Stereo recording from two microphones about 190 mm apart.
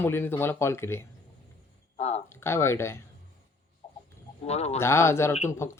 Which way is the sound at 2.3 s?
15° left (ahead or behind).